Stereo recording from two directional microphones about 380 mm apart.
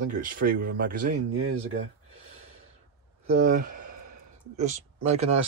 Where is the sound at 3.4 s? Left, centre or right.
Right.